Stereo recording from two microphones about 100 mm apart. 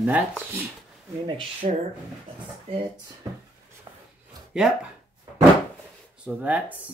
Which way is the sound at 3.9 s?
45° right (ahead or behind).